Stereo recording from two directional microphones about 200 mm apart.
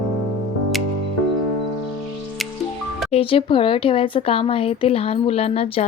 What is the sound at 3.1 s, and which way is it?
Speech, 30° left (ahead or behind).